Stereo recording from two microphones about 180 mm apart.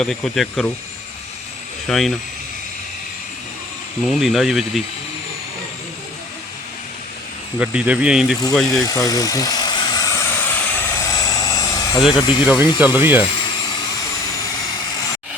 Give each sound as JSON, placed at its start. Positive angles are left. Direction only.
{"t": 0.0, "sound": "speech", "side_deg": 0}
{"t": 1.9, "sound": "speech", "side_deg": 0}
{"t": 4.0, "sound": "speech", "side_deg": 0}
{"t": 7.6, "sound": "speech", "side_deg": -5}
{"t": 8.7, "sound": "vehicle", "side_deg": 20}
{"t": 12.1, "sound": "speech", "side_deg": 25}
{"t": 12.8, "sound": "speech", "side_deg": -10}